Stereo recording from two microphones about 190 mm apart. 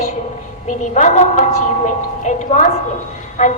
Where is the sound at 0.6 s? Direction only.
40° left (ahead or behind).